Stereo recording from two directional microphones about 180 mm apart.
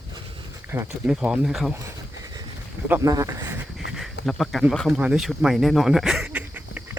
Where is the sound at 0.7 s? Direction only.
10° right (ahead or behind).